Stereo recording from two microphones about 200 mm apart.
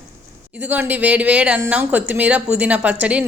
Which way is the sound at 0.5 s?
10° right (ahead or behind).